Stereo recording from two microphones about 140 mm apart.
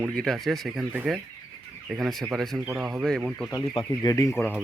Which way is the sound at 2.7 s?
10° right (ahead or behind).